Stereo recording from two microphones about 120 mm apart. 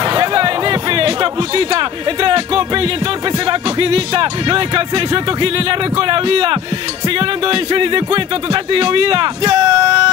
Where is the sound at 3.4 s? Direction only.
45° right (ahead or behind).